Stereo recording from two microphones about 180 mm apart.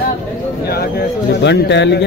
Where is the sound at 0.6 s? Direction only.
60° left (ahead or behind).